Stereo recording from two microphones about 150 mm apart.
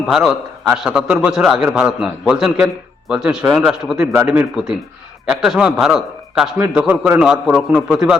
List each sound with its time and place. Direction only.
0.1 s a man's voice: 5° right (ahead or behind)
4.0 s a man's voice: 20° right (ahead or behind)
4.3 s a man's voice: 5° right (ahead or behind)